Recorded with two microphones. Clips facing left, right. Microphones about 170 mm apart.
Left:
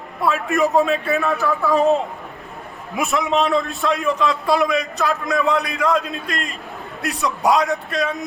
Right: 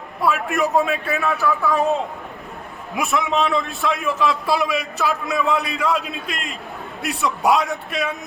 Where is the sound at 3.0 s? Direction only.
Centre (ahead or behind).